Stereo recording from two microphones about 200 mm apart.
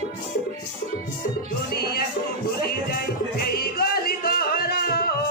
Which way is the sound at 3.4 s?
50° left (ahead or behind).